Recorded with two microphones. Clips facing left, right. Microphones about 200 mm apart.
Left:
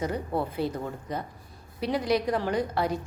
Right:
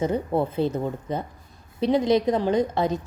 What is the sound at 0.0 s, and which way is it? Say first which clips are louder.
A woman's voice: right 6 dB; 25° right (ahead or behind).